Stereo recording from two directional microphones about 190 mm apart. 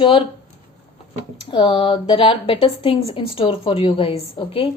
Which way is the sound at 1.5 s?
25° left (ahead or behind).